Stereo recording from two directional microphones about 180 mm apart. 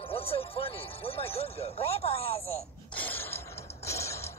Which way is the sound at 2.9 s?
10° left (ahead or behind).